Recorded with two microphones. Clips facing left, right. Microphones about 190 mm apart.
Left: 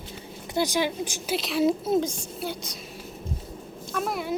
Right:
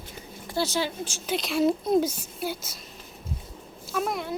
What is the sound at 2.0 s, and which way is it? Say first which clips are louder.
Speech: right 1 dB; 5° right (ahead or behind).